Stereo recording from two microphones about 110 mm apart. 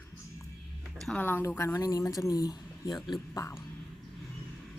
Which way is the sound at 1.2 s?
20° left (ahead or behind).